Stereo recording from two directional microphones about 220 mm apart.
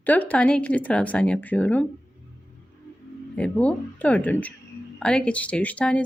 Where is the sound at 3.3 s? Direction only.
5° left (ahead or behind).